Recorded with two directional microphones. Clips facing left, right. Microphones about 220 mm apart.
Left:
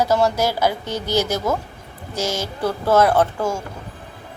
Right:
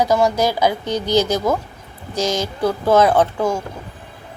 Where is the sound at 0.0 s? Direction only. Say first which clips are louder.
Right 2 dB; 15° right (ahead or behind).